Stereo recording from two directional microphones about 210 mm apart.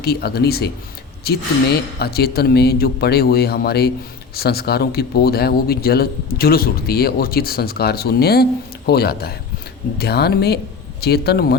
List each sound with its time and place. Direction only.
0.0 s speech: 50° left (ahead or behind)